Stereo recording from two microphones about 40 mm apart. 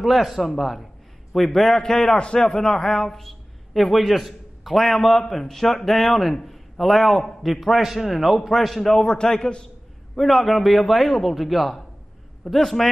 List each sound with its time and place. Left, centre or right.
0.0 s a man's voice: centre
3.2 s a man's voice: centre
8.4 s a man's voice: centre
10.1 s a man's voice: centre